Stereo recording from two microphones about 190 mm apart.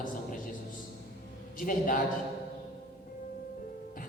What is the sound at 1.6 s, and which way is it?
Speech, 45° left (ahead or behind).